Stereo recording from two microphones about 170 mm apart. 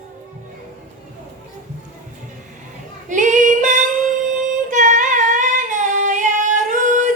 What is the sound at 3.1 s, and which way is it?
Female singing, 45° right (ahead or behind).